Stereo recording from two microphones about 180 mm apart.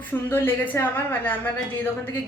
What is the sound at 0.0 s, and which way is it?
A woman's voice, 10° left (ahead or behind).